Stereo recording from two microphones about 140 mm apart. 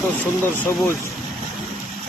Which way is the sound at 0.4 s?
15° left (ahead or behind).